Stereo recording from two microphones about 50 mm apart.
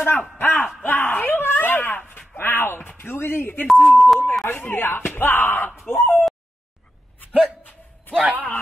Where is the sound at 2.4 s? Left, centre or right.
Left.